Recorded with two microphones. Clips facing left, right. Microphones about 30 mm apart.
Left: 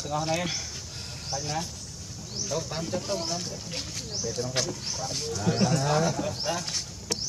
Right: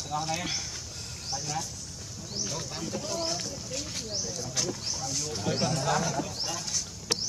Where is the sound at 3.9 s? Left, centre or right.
Centre.